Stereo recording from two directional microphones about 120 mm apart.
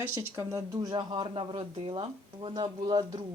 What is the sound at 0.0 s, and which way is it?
Speech, 20° right (ahead or behind).